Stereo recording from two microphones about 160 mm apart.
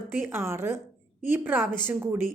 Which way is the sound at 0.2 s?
15° right (ahead or behind).